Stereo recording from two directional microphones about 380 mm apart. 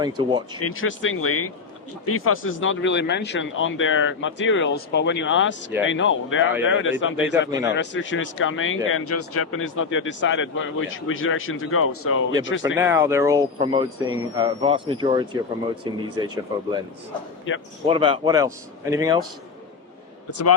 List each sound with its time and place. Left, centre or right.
0.0 s speech: centre
0.6 s a man's voice: left
12.7 s speech: centre
17.5 s speech: left
17.8 s speech: centre